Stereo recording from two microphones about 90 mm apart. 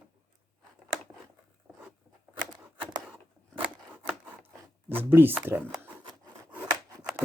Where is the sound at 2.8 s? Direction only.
90° right.